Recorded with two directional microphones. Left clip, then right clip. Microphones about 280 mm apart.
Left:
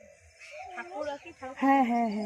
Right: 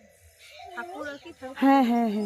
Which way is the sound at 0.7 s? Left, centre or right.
Right.